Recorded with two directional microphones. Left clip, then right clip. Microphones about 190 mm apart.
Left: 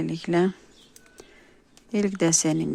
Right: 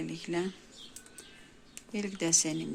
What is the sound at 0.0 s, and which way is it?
Speech, 55° left (ahead or behind).